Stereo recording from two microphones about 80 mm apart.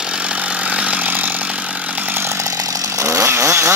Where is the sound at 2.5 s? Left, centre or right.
Right.